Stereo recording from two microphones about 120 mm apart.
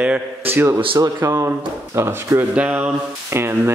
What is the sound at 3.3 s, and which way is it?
Speech, 20° right (ahead or behind).